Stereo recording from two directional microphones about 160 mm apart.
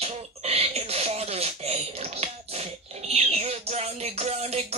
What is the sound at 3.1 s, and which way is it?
Music, 40° right (ahead or behind).